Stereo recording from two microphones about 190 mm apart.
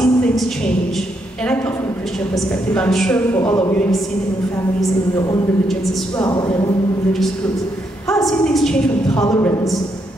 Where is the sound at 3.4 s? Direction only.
15° left (ahead or behind).